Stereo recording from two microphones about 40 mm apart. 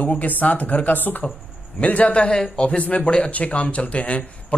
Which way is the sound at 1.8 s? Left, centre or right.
Left.